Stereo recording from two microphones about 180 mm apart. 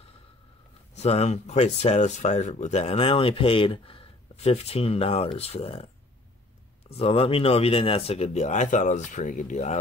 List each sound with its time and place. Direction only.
0.9 s speech: 35° left (ahead or behind)
6.9 s speech: 35° left (ahead or behind)